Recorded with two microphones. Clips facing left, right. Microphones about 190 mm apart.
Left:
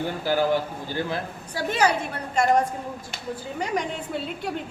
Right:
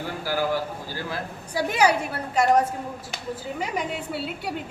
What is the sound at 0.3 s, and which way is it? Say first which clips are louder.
Speech: left 3 dB; 25° left (ahead or behind).